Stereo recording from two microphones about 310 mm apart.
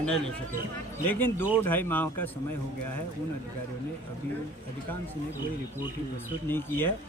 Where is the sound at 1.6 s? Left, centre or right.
Centre.